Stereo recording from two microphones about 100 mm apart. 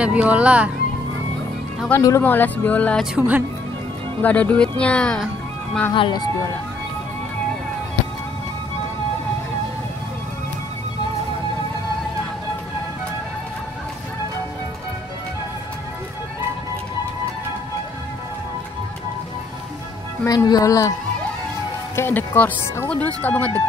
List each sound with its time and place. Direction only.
0.0 s speech: 10° right (ahead or behind)
2.0 s speech: 35° left (ahead or behind)
2.2 s speech: 20° left (ahead or behind)
3.2 s speech: 15° right (ahead or behind)
4.2 s speech: 15° left (ahead or behind)
5.9 s speech: 55° left (ahead or behind)
20.2 s speech: 40° left (ahead or behind)
21.9 s speech: 20° left (ahead or behind)